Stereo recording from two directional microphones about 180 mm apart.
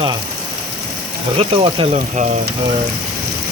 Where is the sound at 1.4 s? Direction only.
30° right (ahead or behind).